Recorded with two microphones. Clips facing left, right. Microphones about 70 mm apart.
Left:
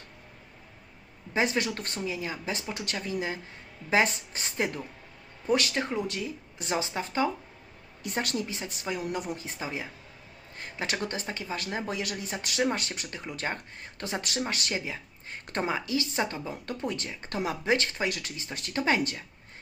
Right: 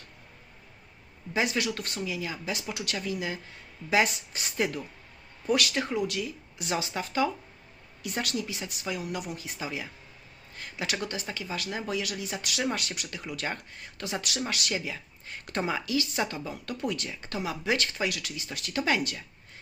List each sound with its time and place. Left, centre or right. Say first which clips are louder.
1.3 s speech: left 1 dB; left